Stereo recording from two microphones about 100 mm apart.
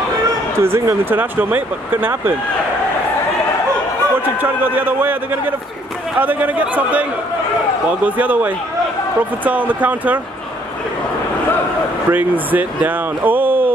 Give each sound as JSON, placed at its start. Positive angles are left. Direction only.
{"t": 0.6, "sound": "speech", "side_deg": -25}
{"t": 4.4, "sound": "a man's voice", "side_deg": -20}
{"t": 12.1, "sound": "speech", "side_deg": -20}